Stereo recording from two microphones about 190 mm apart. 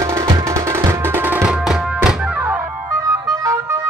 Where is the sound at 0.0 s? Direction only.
15° right (ahead or behind).